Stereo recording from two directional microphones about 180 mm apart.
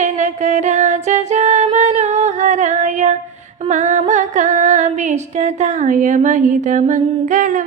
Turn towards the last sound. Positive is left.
turn(degrees=-45)  # may be behind; listen again after turning